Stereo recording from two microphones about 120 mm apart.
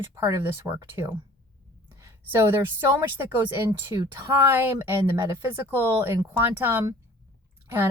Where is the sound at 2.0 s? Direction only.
20° right (ahead or behind).